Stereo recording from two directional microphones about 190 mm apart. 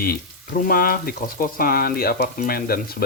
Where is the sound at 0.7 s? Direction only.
50° left (ahead or behind).